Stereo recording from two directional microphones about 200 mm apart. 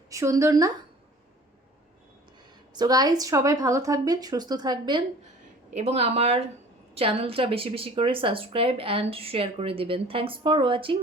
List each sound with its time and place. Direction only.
0.1 s a woman's voice: 15° right (ahead or behind)
2.7 s speech: 20° right (ahead or behind)